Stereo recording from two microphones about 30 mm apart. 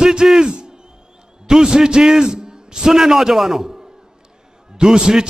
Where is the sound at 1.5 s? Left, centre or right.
Right.